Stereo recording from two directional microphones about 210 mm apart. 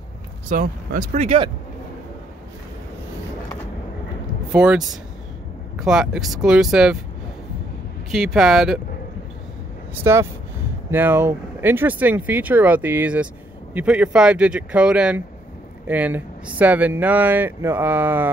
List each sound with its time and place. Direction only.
0.5 s speech: 40° right (ahead or behind)
1.1 s speech: 30° right (ahead or behind)
4.5 s speech: 5° right (ahead or behind)
8.1 s speech: centre (ahead or behind)
10.1 s speech: 15° right (ahead or behind)